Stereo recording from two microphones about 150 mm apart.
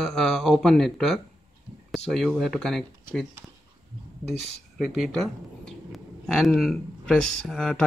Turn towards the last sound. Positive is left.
turn(degrees=5)  # may be behind; listen again after turning